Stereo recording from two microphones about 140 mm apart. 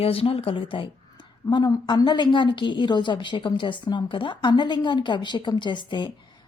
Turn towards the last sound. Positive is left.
turn(degrees=35)  # may be behind; listen again after turning